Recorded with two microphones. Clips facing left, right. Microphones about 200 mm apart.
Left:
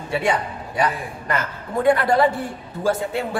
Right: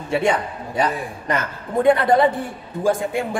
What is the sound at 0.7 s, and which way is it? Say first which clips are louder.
A woman's voice: right 1 dB; 20° right (ahead or behind).